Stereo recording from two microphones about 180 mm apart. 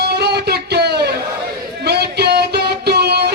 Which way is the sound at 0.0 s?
65° right (ahead or behind).